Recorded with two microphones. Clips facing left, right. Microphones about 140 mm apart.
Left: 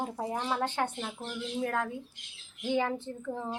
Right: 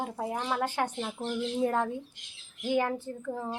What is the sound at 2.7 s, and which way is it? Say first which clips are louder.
Speech: right 1 dB; 10° right (ahead or behind).